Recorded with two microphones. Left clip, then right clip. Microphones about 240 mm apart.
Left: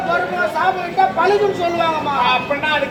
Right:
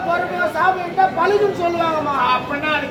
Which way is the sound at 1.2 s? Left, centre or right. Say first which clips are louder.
Left 1 dB; left.